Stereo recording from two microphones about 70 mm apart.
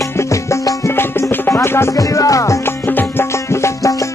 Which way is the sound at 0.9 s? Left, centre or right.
Left.